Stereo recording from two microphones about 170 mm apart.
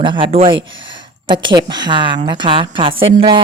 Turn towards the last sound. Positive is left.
turn(degrees=-30)  # may be behind; listen again after turning